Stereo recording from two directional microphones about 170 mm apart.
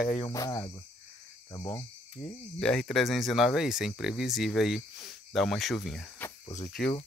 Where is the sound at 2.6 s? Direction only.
5° left (ahead or behind).